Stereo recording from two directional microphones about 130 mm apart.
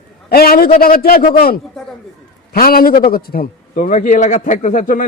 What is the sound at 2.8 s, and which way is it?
Speech, 90° left.